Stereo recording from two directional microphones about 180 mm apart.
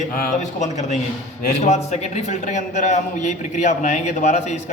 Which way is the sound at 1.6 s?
40° left (ahead or behind).